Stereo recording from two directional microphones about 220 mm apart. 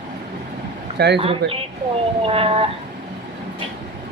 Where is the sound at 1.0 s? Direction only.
50° right (ahead or behind).